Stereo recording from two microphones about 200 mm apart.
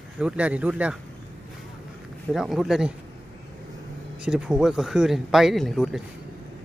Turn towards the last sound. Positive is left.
turn(degrees=0)  # may be behind; listen again after turning